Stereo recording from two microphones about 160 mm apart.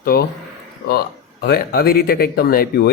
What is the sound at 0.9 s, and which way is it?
Speech, 75° left (ahead or behind).